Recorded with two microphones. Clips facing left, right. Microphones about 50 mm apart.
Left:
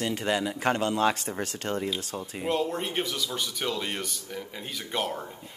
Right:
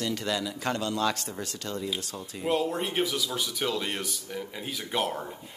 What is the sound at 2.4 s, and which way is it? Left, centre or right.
Speech, centre.